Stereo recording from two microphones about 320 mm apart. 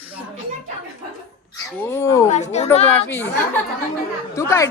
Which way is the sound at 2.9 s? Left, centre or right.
Centre.